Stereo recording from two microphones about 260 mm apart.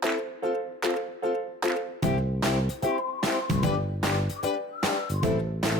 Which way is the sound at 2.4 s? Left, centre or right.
Centre.